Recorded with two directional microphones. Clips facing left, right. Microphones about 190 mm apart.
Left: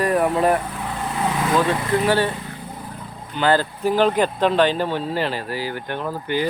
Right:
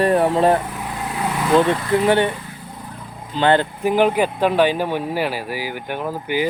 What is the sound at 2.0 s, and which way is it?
Speech, 20° right (ahead or behind).